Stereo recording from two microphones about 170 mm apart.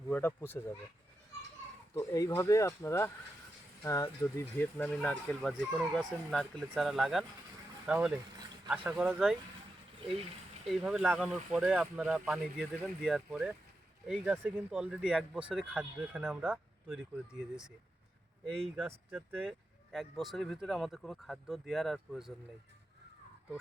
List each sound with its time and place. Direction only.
0.1 s speech: 10° left (ahead or behind)
2.0 s speech: 20° left (ahead or behind); by 9.2 s 10° right (ahead or behind)
10.7 s speech: 5° right (ahead or behind)
18.8 s speech: 10° right (ahead or behind)